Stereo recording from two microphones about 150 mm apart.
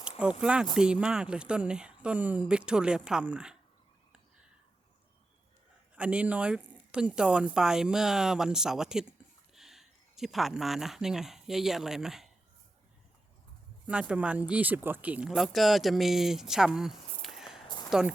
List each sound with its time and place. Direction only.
0.2 s speech: 5° right (ahead or behind)
6.0 s speech: 10° right (ahead or behind)
13.8 s speech: 5° right (ahead or behind)
17.7 s a sound: 30° left (ahead or behind)